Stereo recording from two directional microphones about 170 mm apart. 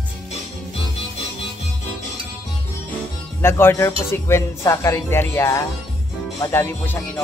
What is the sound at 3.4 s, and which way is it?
A man's voice, 15° left (ahead or behind).